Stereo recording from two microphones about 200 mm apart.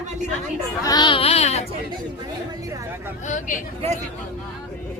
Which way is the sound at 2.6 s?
15° right (ahead or behind).